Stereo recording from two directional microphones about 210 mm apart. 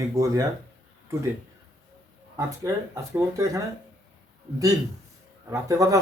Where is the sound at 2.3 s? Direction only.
15° right (ahead or behind).